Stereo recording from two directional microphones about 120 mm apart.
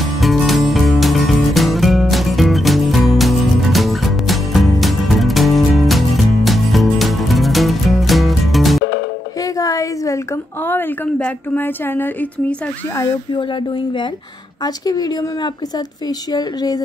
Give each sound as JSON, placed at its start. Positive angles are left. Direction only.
{"t": 0.0, "sound": "music", "side_deg": 0}
{"t": 9.4, "sound": "a sound", "side_deg": 30}
{"t": 12.9, "sound": "speech", "side_deg": 35}